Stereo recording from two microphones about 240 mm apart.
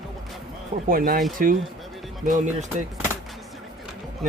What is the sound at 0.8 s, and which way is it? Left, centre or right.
Speech, right.